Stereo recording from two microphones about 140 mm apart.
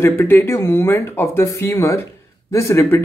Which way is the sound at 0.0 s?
15° left (ahead or behind).